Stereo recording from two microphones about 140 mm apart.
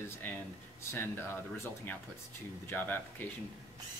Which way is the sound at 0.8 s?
20° left (ahead or behind).